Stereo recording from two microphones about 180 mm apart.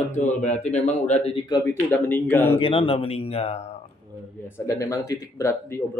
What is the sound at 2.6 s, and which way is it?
Speech, 30° left (ahead or behind).